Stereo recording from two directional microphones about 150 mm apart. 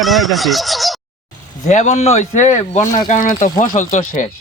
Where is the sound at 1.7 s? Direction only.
50° left (ahead or behind).